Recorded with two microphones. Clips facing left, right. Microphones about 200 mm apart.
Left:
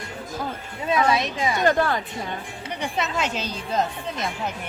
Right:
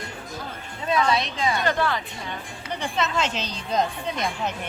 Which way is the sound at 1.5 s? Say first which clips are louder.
Left 6 dB; 45° left (ahead or behind).